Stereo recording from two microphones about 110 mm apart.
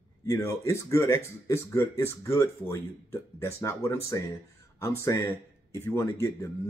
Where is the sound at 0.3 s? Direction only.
25° left (ahead or behind).